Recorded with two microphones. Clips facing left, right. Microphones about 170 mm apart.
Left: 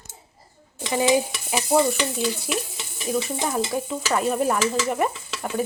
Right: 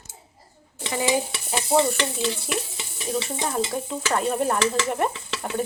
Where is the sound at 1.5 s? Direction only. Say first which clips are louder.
Left 1 dB; 5° left (ahead or behind).